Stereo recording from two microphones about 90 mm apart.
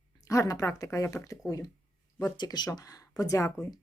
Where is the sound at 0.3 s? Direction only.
40° left (ahead or behind).